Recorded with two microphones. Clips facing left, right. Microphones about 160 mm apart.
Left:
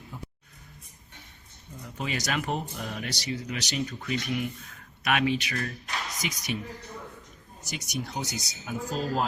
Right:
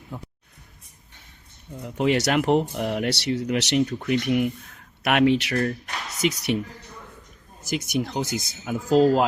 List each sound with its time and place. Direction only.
0.1 s speech: 60° right (ahead or behind)
1.8 s speech: 65° right (ahead or behind)
7.6 s speech: 75° right (ahead or behind)
8.6 s speech: 90° right